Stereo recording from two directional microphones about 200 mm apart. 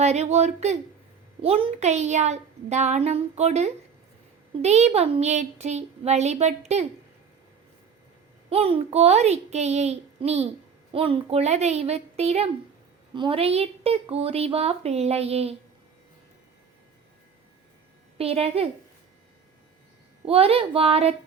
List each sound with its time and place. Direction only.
0.0 s a woman's voice: 35° right (ahead or behind)
8.4 s a woman's voice: 30° right (ahead or behind)
18.2 s a woman's voice: 30° right (ahead or behind)
20.2 s a woman's voice: 30° right (ahead or behind)